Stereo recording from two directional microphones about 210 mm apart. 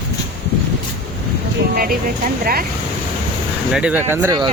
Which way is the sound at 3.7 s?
5° right (ahead or behind).